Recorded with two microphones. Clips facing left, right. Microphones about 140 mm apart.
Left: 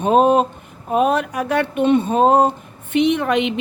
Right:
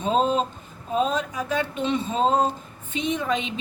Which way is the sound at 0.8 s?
65° left (ahead or behind).